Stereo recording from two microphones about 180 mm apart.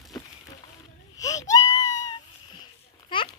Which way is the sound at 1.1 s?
20° left (ahead or behind).